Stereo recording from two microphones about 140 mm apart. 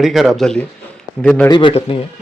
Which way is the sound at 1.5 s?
35° left (ahead or behind).